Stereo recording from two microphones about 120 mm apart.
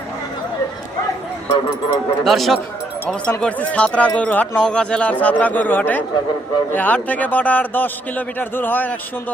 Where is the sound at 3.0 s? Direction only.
10° left (ahead or behind).